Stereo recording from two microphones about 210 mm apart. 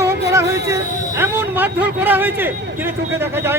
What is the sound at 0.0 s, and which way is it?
Music, 15° right (ahead or behind).